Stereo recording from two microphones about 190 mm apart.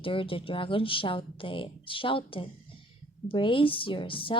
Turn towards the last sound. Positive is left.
turn(degrees=25)  # may be behind; listen again after turning